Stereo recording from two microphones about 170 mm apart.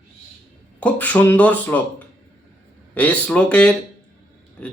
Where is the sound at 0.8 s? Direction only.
10° left (ahead or behind).